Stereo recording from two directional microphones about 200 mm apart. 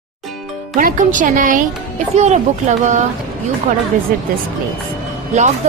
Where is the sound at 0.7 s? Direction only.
40° right (ahead or behind).